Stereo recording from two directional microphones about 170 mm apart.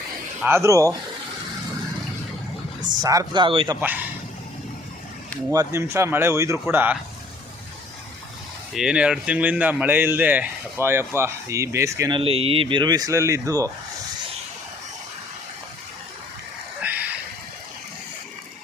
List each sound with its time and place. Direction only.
0.4 s speech: 15° right (ahead or behind)
3.0 s speech: 20° right (ahead or behind)
3.8 s speech: 10° right (ahead or behind)
5.5 s speech: 15° right (ahead or behind)
8.7 s speech: 5° right (ahead or behind)
12.1 s speech: 35° right (ahead or behind)
16.8 s a sound: 10° right (ahead or behind)